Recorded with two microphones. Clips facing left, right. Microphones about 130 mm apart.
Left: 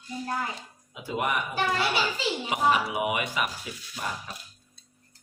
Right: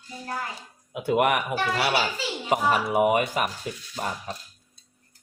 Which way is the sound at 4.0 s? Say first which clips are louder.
Right 3 dB; 40° right (ahead or behind).